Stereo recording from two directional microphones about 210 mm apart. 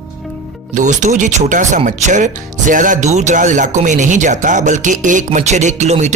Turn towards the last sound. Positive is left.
turn(degrees=-35)  # may be behind; listen again after turning